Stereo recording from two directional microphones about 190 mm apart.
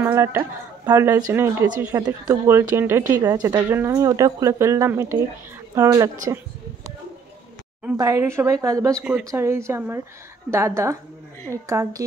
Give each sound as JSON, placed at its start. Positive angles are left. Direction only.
{"t": 0.0, "sound": "speech", "side_deg": -15}
{"t": 8.0, "sound": "speech", "side_deg": -15}
{"t": 8.9, "sound": "speech", "side_deg": 0}
{"t": 9.3, "sound": "speech", "side_deg": -15}